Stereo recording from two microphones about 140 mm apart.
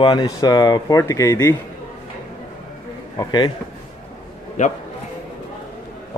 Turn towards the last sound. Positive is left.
turn(degrees=60)  # may be behind; listen again after turning